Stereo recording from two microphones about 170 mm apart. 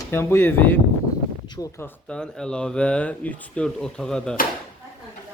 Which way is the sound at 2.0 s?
5° left (ahead or behind).